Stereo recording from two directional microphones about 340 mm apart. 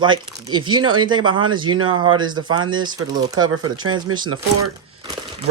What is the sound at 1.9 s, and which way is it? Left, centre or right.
Speech, right.